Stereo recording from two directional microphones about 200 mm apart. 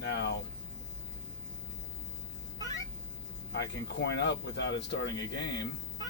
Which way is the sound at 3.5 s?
55° left (ahead or behind).